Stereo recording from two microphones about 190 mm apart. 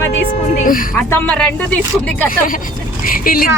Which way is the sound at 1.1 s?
10° left (ahead or behind).